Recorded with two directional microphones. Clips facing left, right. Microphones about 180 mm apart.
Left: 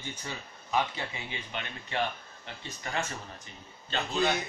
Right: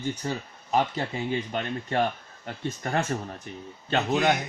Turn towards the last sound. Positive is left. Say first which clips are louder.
# right 6 dB
turn(degrees=-70)  # may be behind; listen again after turning